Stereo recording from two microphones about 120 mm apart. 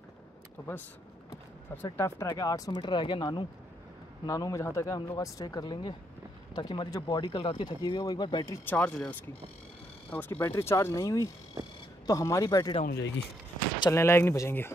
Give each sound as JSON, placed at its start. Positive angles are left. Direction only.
{"t": 1.8, "sound": "speech", "side_deg": 20}
{"t": 4.3, "sound": "speech", "side_deg": 30}
{"t": 8.6, "sound": "speech", "side_deg": 10}
{"t": 10.1, "sound": "speech", "side_deg": 15}
{"t": 13.7, "sound": "speech", "side_deg": 25}